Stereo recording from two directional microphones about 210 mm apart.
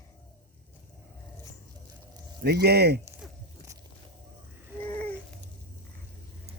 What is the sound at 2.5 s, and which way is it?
Speech, 50° right (ahead or behind).